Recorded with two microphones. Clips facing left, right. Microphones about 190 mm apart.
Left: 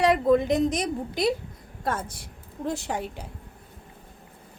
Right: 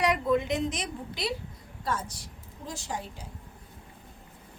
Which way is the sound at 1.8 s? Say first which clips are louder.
Left 3 dB; 55° left (ahead or behind).